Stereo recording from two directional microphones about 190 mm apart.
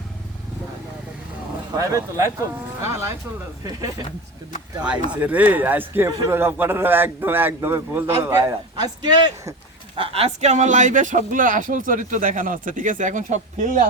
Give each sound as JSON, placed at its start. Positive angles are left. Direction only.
{"t": 1.8, "sound": "a man's voice", "side_deg": -15}
{"t": 5.2, "sound": "a man's voice", "side_deg": -10}
{"t": 9.9, "sound": "speech", "side_deg": -30}